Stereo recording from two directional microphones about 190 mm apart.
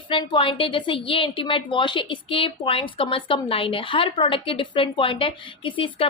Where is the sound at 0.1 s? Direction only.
25° left (ahead or behind).